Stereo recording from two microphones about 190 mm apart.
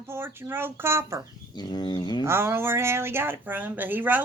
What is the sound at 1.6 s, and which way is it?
Bird, 20° left (ahead or behind).